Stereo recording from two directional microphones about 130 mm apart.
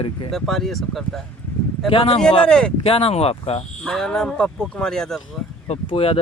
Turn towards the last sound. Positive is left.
turn(degrees=45)  # may be behind; listen again after turning